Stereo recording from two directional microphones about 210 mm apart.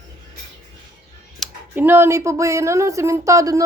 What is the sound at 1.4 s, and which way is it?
Speech, 10° right (ahead or behind).